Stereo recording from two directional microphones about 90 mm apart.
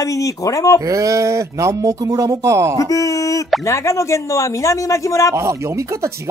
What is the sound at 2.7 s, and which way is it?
Speech, 40° left (ahead or behind).